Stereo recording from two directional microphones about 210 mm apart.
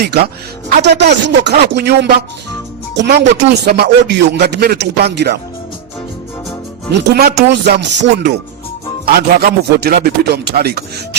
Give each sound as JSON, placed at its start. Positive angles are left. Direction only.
{"t": 0.0, "sound": "speech", "side_deg": -50}
{"t": 6.9, "sound": "speech", "side_deg": -50}